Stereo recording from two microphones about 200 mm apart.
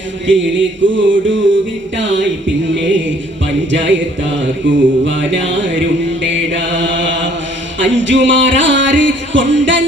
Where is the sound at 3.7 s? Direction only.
65° right (ahead or behind).